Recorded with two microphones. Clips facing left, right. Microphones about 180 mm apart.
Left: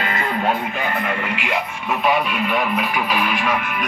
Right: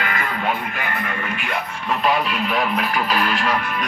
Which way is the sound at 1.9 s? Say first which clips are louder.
Left 1 dB; 5° left (ahead or behind).